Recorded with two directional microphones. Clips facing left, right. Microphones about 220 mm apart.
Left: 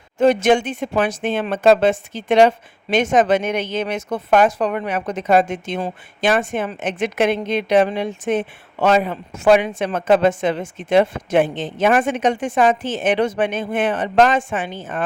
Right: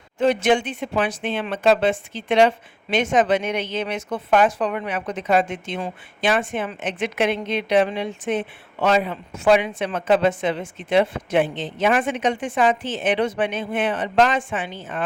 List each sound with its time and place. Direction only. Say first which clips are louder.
0.2 s speech: left 4 dB; 45° left (ahead or behind)